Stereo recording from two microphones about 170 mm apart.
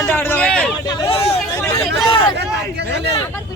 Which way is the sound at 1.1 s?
35° left (ahead or behind).